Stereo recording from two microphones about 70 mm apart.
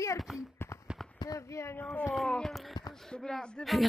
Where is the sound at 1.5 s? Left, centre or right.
Left.